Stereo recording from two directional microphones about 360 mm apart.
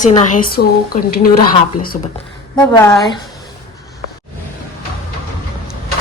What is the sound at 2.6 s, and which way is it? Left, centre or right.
Speech, centre.